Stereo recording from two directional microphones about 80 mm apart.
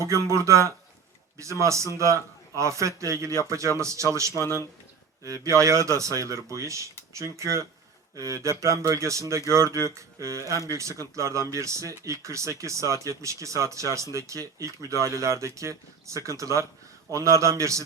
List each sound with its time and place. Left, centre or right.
0.0 s speech: right
9.8 s a sound: right
10.7 s speech: right